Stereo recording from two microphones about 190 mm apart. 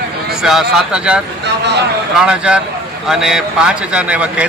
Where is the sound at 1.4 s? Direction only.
65° right (ahead or behind).